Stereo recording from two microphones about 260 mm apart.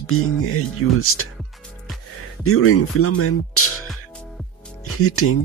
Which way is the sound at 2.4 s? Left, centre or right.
Left.